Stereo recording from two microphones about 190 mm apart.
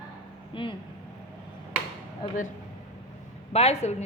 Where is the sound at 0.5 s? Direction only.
25° left (ahead or behind).